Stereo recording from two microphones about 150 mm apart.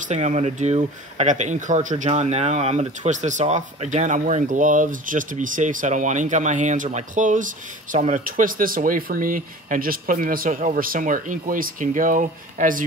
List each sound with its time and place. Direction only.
0.0 s speech: 50° right (ahead or behind)